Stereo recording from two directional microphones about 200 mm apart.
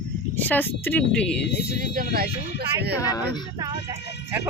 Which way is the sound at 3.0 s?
20° left (ahead or behind).